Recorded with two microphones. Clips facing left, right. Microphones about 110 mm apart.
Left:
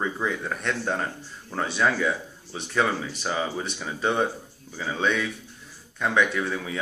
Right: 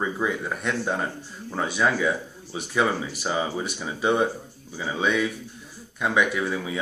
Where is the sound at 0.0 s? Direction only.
5° right (ahead or behind).